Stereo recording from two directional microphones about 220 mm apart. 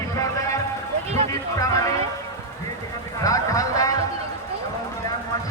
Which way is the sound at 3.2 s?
15° left (ahead or behind).